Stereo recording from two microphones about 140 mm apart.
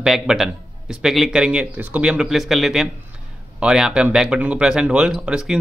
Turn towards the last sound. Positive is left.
turn(degrees=-5)  # may be behind; listen again after turning